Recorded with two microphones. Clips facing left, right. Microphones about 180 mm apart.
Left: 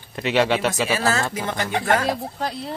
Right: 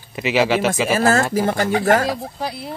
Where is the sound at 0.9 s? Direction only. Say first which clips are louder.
Right 6 dB; 50° right (ahead or behind).